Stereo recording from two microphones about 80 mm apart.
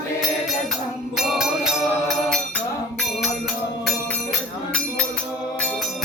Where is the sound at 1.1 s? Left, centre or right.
Centre.